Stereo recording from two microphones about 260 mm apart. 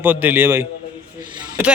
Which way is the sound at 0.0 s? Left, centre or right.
Centre.